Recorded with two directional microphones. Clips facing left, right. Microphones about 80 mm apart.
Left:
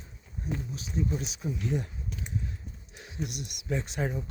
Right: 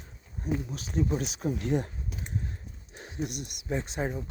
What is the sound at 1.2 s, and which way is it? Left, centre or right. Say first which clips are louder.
Speech: right 3 dB; right.